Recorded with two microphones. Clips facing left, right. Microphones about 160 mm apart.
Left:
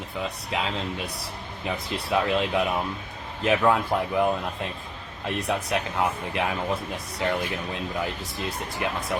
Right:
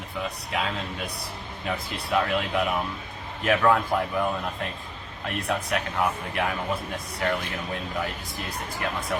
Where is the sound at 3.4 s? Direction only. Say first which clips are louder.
Even; 20° left (ahead or behind).